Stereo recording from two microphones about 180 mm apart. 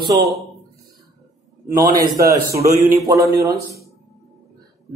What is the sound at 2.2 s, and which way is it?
A man's voice, 20° right (ahead or behind).